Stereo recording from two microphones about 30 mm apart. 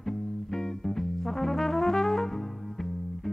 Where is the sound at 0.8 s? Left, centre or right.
Centre.